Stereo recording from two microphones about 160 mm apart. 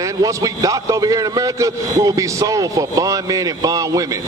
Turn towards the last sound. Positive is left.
turn(degrees=-20)  # may be behind; listen again after turning